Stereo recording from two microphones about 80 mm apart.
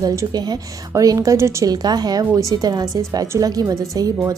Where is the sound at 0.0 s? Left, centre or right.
Right.